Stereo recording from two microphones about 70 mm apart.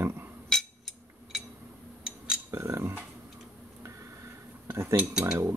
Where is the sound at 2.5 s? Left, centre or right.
Right.